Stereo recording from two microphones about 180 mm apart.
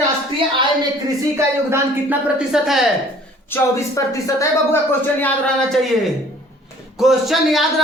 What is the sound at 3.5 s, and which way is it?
Speech, 15° left (ahead or behind).